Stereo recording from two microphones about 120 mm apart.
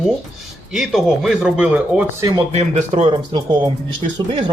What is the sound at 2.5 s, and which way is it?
Speech, 70° right (ahead or behind).